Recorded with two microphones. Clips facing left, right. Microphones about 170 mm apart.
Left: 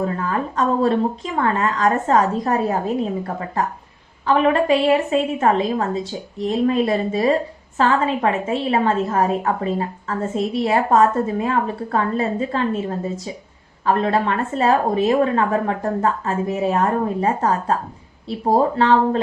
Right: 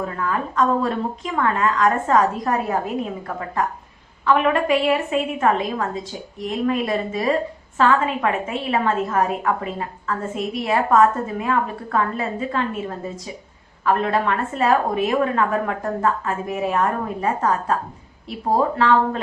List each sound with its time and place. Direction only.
0.0 s a woman's voice: 35° left (ahead or behind)
13.8 s a woman's voice: 30° left (ahead or behind)
18.8 s a woman's voice: 30° left (ahead or behind)